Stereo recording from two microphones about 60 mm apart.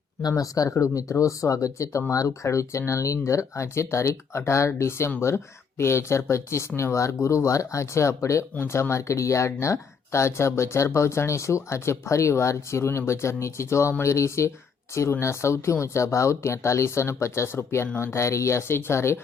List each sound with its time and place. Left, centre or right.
0.3 s speech: left
0.7 s speech: left